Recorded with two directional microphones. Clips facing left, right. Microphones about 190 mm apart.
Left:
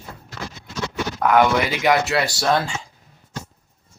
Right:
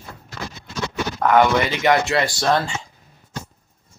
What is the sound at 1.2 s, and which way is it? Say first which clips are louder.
Speech: right 1 dB; 5° left (ahead or behind).